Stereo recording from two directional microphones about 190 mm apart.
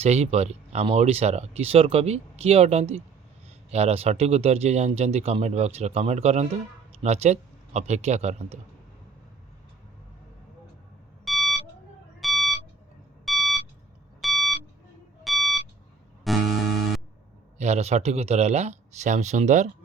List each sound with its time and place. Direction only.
0.0 s speech: 35° right (ahead or behind)
11.3 s a sound: centre (ahead or behind)
12.2 s beep: centre (ahead or behind)
13.2 s a sound: centre (ahead or behind)
14.2 s beep: centre (ahead or behind)
16.2 s music: centre (ahead or behind)
17.6 s speech: 35° right (ahead or behind)